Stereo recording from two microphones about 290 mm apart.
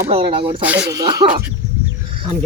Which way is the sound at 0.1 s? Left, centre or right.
Centre.